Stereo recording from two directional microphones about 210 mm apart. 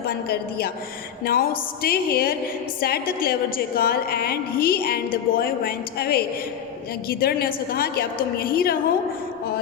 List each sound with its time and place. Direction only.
1.2 s speech: 45° left (ahead or behind)